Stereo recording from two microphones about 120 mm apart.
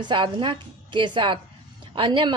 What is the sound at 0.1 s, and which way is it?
A woman's voice, 45° right (ahead or behind).